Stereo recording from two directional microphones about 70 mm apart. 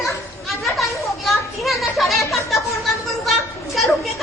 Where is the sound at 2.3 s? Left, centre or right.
Centre.